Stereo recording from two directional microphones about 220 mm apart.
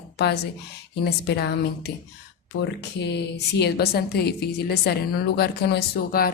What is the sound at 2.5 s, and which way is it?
A woman's voice, 55° left (ahead or behind).